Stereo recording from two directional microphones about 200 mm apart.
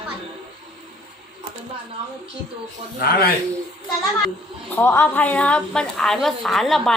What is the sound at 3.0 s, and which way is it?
Speech, 50° left (ahead or behind).